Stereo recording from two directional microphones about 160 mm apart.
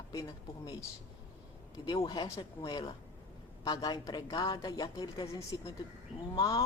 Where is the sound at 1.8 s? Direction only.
25° left (ahead or behind).